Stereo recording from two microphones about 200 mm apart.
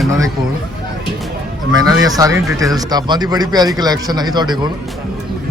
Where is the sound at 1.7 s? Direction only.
15° right (ahead or behind).